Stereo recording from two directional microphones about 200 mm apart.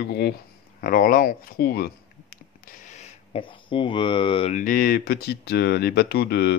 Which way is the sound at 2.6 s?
40° left (ahead or behind).